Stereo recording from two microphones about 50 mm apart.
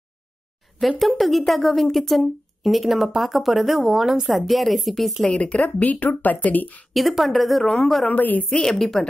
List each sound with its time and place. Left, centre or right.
0.7 s speech: centre
5.2 s speech: left
6.9 s speech: centre
8.1 s speech: left
8.5 s a woman's voice: centre